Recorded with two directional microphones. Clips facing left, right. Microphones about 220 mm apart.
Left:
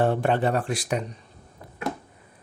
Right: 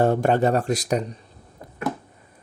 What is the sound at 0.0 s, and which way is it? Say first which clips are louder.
Speech: right 3 dB; 40° right (ahead or behind).